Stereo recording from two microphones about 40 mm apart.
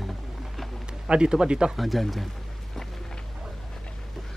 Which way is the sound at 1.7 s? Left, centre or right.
Centre.